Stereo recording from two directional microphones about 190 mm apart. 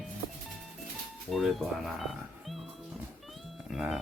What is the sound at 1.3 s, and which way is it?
Speech, centre (ahead or behind).